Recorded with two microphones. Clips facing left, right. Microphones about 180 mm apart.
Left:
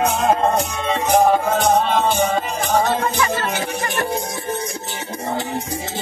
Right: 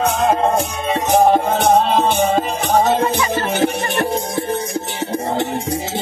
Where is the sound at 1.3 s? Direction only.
25° right (ahead or behind).